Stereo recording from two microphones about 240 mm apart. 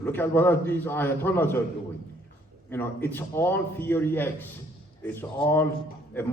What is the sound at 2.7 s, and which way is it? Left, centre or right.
A man's voice, centre.